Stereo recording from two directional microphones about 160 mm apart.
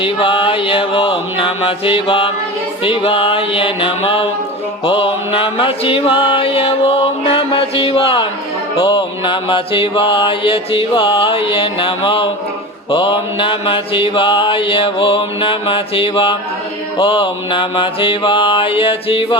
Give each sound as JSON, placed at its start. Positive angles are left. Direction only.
{"t": 0.0, "sound": "mantra", "side_deg": 30}